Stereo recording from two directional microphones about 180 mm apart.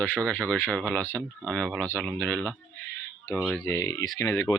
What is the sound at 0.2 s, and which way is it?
Speech, 5° left (ahead or behind).